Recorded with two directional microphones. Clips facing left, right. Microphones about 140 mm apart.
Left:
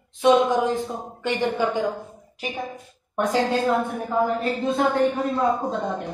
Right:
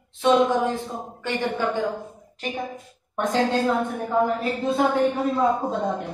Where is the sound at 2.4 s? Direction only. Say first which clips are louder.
Right 1 dB; centre (ahead or behind).